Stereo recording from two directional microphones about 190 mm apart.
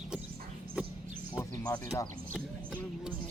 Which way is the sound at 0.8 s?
5° right (ahead or behind).